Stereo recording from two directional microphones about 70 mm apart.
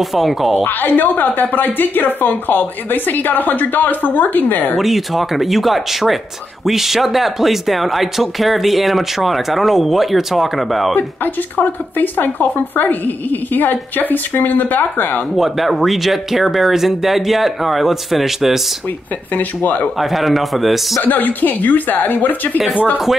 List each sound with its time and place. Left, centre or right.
0.0 s speech: centre
0.7 s speech: left
4.7 s speech: centre
11.0 s speech: left
15.3 s speech: centre
19.3 s speech: left
20.0 s speech: centre
21.0 s speech: left